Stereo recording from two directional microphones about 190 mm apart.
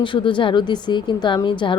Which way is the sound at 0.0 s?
25° left (ahead or behind).